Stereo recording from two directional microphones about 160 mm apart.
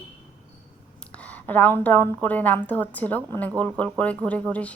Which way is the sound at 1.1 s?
10° left (ahead or behind).